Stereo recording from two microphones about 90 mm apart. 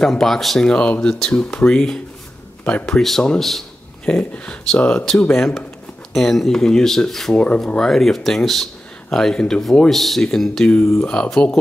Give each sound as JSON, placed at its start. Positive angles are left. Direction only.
{"t": 0.0, "sound": "speech", "side_deg": 5}
{"t": 3.0, "sound": "speech", "side_deg": 5}
{"t": 10.8, "sound": "speech", "side_deg": 25}
{"t": 11.1, "sound": "speech", "side_deg": 10}